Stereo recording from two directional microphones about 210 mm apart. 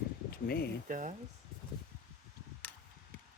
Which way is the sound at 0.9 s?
40° right (ahead or behind).